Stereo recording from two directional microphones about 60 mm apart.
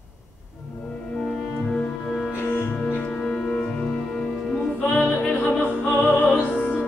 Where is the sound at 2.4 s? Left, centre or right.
Left.